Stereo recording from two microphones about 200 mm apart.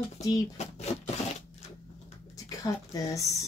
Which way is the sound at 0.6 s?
35° left (ahead or behind).